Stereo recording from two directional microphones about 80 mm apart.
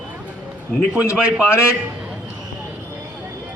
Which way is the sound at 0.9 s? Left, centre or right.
Centre.